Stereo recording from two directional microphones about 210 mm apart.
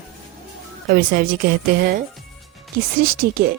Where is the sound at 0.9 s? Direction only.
45° right (ahead or behind).